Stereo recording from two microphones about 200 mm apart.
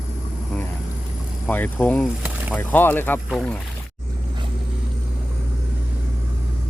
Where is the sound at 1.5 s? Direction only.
10° left (ahead or behind).